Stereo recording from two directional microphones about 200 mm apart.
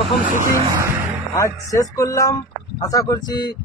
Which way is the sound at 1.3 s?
15° left (ahead or behind).